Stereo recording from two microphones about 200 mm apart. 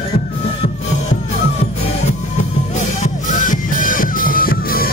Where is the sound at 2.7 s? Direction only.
35° left (ahead or behind).